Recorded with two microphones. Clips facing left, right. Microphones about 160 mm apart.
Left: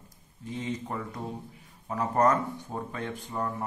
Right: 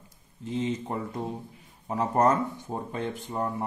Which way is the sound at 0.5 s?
25° right (ahead or behind).